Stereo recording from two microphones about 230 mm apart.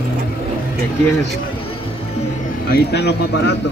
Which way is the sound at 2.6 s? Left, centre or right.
Left.